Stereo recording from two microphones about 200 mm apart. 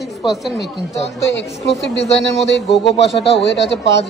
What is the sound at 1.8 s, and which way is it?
A man's voice, 60° left (ahead or behind).